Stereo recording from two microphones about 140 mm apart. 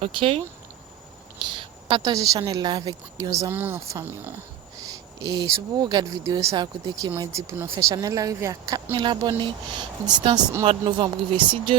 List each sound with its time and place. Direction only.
0.0 s speech: 40° right (ahead or behind)
2.0 s speech: 25° right (ahead or behind)
3.5 s speech: 15° right (ahead or behind)
4.9 s speech: 25° right (ahead or behind)
8.9 s speech: 35° right (ahead or behind)